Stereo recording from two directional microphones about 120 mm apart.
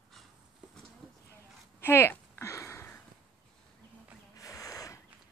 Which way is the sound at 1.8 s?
20° left (ahead or behind).